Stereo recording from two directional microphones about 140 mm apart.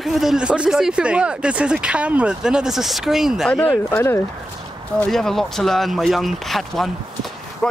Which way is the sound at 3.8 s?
15° left (ahead or behind).